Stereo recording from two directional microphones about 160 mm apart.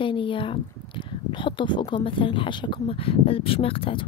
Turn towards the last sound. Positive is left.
turn(degrees=35)  # may be behind; listen again after turning